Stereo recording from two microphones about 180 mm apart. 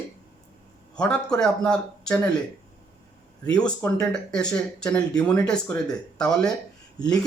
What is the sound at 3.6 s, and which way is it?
Speech, 5° left (ahead or behind).